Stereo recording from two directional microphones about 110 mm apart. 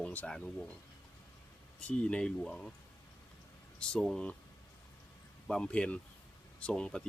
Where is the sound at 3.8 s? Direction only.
5° left (ahead or behind).